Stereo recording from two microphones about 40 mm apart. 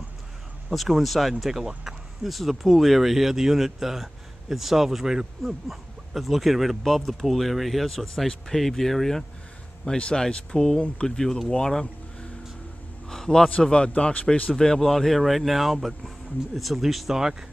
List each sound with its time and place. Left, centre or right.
0.7 s speech: centre
9.8 s speech: left
11.6 s vehicle: centre
13.1 s a sound: centre
13.6 s speech: left
14.5 s speech: centre
17.2 s speech: centre